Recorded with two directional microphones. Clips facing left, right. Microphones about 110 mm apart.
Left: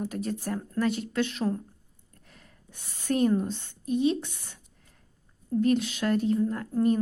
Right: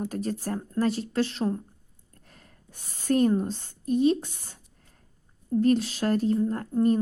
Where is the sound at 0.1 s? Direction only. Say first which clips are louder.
Right 1 dB; 40° right (ahead or behind).